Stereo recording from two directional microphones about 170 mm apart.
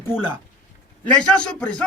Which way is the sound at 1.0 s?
5° left (ahead or behind).